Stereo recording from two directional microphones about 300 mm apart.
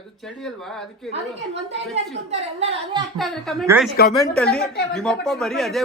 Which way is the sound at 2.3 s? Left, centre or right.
Right.